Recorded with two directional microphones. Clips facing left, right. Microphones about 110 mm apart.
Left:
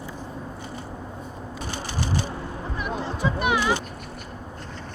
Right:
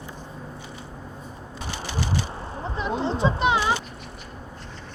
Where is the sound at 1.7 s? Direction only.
40° left (ahead or behind).